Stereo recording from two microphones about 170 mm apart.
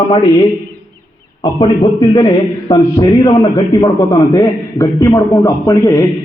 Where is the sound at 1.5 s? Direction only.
25° left (ahead or behind).